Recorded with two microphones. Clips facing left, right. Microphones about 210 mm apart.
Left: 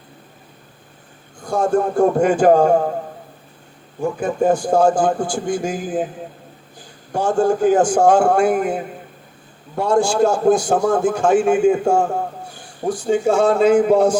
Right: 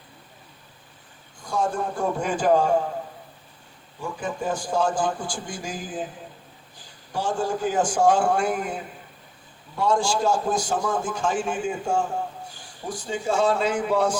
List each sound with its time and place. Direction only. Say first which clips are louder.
1.4 s a man's voice: left 8 dB; 50° left (ahead or behind)
4.0 s a man's voice: left 11 dB; 50° left (ahead or behind)
7.1 s a man's voice: left 9 dB; 50° left (ahead or behind)